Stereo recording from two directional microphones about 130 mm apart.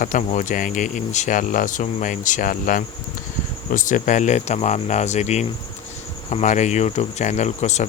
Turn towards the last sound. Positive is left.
turn(degrees=60)  # may be behind; listen again after turning